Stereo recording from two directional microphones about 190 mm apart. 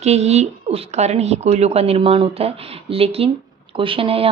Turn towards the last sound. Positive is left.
turn(degrees=-30)  # may be behind; listen again after turning